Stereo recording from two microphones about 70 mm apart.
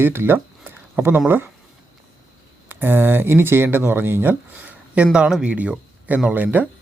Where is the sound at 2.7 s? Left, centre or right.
Right.